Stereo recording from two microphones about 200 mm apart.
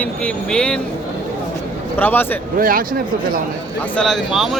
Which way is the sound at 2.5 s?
45° right (ahead or behind).